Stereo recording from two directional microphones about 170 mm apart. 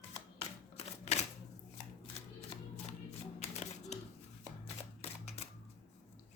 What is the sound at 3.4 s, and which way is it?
Music, 40° left (ahead or behind).